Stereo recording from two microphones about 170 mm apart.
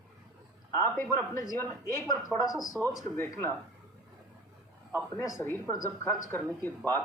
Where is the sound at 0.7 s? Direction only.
15° left (ahead or behind).